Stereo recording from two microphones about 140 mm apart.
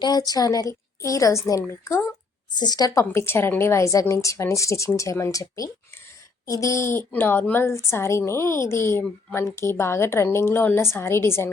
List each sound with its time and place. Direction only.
0.0 s a woman's voice: 30° left (ahead or behind)